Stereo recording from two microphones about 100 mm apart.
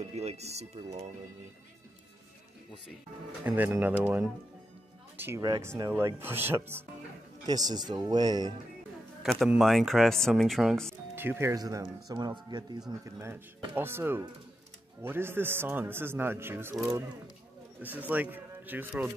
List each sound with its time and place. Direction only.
0.1 s speech: 90° right
3.4 s a man's voice: 20° right (ahead or behind)
7.4 s speech: 40° right (ahead or behind)
9.2 s speech: centre (ahead or behind)
11.1 s speech: 25° right (ahead or behind)
11.5 s speech: 40° right (ahead or behind)
13.0 s a man's voice: 25° right (ahead or behind)
17.8 s speech: 15° right (ahead or behind)